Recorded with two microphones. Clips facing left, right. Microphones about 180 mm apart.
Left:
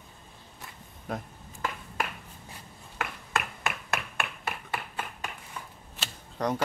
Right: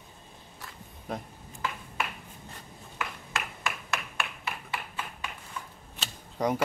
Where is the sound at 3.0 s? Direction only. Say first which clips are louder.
Left 3 dB; 60° left (ahead or behind).